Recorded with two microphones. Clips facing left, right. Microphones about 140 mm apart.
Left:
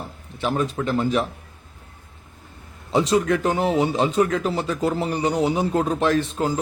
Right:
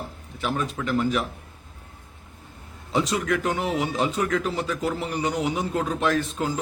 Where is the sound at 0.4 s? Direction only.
35° left (ahead or behind).